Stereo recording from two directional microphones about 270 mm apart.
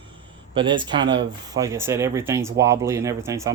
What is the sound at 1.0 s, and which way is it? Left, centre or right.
Speech, right.